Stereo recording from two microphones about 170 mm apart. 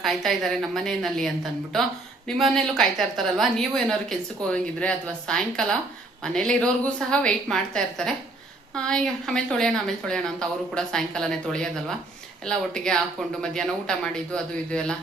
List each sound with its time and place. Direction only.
0.0 s a woman's voice: centre (ahead or behind)